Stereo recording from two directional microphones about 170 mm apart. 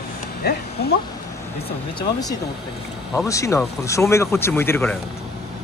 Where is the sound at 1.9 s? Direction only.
20° left (ahead or behind).